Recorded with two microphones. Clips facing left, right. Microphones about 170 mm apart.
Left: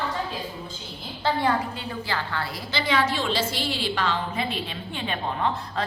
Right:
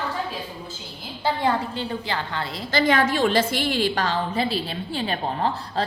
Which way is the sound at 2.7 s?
50° right (ahead or behind).